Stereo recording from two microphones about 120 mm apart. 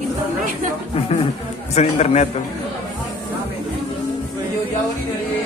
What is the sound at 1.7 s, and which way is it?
Speech, 65° left (ahead or behind).